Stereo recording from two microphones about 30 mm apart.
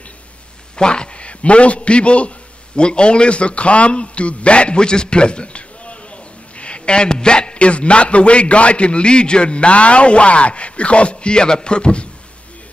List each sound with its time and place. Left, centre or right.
0.7 s a man's voice: left